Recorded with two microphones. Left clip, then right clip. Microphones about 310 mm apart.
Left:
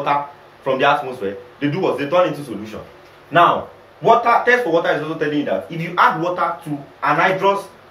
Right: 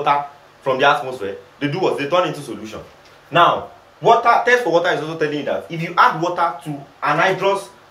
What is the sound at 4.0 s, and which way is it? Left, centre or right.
Speech, centre.